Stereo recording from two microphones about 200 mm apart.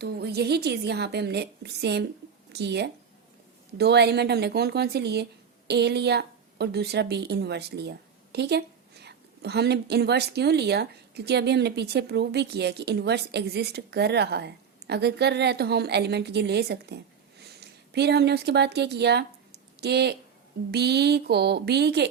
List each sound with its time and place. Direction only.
0.0 s speech: 55° right (ahead or behind)